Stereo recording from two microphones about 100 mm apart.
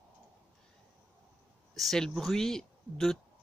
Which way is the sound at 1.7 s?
5° left (ahead or behind).